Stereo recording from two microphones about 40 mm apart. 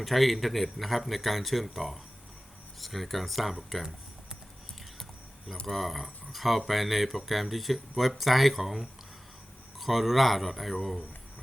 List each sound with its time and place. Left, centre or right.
0.0 s speech: centre
5.6 s speech: centre